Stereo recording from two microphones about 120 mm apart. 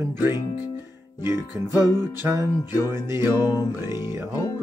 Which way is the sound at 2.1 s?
25° right (ahead or behind).